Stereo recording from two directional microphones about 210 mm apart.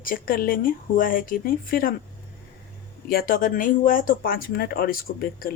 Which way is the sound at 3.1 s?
45° left (ahead or behind).